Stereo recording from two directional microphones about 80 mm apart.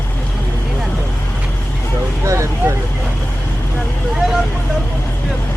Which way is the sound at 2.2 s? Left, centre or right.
Right.